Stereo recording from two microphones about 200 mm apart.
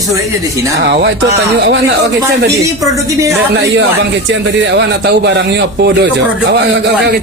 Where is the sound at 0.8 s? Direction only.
60° right (ahead or behind).